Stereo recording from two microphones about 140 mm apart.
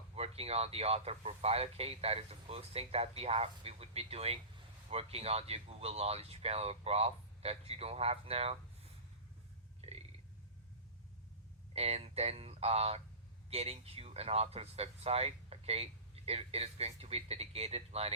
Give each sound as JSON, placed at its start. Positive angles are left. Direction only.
{"t": 0.2, "sound": "speech", "side_deg": -45}
{"t": 11.7, "sound": "speech", "side_deg": -45}